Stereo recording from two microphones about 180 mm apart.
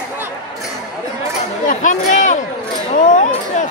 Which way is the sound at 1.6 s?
45° left (ahead or behind).